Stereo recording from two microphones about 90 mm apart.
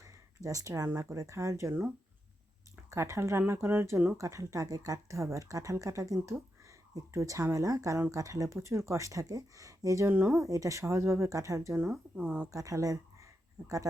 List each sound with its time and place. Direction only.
0.0 s a sound: 40° right (ahead or behind)
0.9 s speech: 30° right (ahead or behind)
2.9 s speech: 30° right (ahead or behind)
10.1 s speech: 20° right (ahead or behind)
10.4 s speech: 35° right (ahead or behind)
12.2 s speech: 20° right (ahead or behind)
12.5 s speech: 40° right (ahead or behind)
13.6 s speech: 25° right (ahead or behind)